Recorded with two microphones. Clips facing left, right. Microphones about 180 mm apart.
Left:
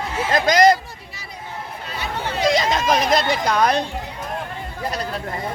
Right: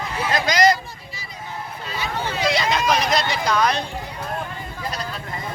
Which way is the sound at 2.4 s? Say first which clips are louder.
Left 3 dB; 45° left (ahead or behind).